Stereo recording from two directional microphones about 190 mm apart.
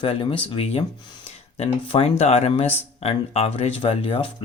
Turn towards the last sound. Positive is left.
turn(degrees=30)  # may be behind; listen again after turning